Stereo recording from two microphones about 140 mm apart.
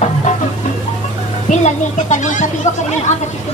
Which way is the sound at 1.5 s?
55° left (ahead or behind).